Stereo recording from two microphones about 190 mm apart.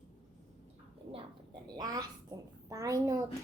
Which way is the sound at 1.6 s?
20° right (ahead or behind).